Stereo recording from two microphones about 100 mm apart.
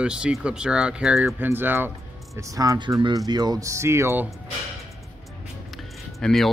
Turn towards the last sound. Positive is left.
turn(degrees=5)  # may be behind; listen again after turning